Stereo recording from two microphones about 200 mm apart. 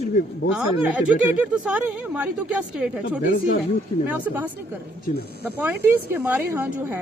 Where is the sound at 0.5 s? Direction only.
5° right (ahead or behind).